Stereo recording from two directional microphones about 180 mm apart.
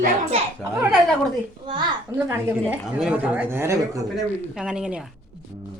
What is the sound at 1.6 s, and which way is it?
Speech, 25° right (ahead or behind).